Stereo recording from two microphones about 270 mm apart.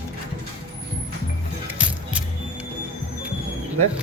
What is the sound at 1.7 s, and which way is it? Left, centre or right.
Music, centre.